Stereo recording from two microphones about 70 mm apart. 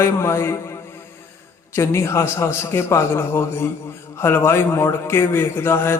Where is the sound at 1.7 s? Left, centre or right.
Left.